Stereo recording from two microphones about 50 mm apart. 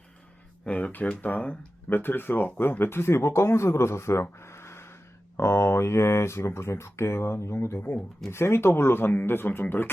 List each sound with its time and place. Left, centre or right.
0.6 s speech: left
1.9 s speech: left